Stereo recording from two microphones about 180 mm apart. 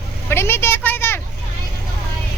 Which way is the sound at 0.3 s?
15° left (ahead or behind).